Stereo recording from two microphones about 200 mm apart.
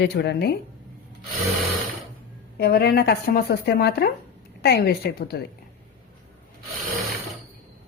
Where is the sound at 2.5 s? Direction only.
55° left (ahead or behind).